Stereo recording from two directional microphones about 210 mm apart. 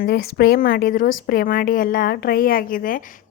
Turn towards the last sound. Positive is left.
turn(degrees=40)  # may be behind; listen again after turning